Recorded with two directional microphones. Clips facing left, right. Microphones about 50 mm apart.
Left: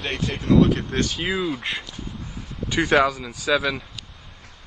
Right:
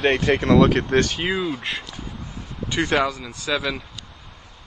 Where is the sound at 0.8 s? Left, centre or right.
Right.